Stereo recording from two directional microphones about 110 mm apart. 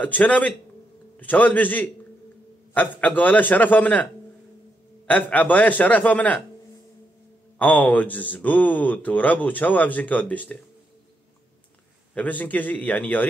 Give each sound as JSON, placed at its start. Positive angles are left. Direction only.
{"t": 0.0, "sound": "speech", "side_deg": 15}
{"t": 7.5, "sound": "speech", "side_deg": 15}
{"t": 12.1, "sound": "speech", "side_deg": 15}